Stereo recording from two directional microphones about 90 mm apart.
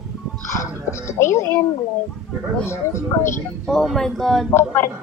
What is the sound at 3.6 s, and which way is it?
Speech, centre (ahead or behind).